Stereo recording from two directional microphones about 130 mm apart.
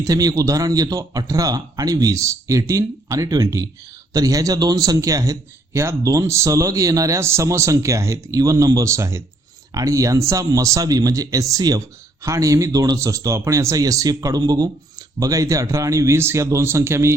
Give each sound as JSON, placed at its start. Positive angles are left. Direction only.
{"t": 0.0, "sound": "a man's voice", "side_deg": -30}